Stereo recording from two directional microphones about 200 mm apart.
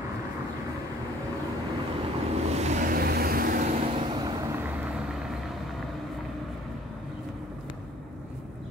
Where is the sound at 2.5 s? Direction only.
35° right (ahead or behind).